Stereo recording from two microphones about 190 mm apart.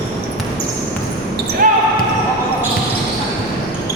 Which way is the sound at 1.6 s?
45° right (ahead or behind).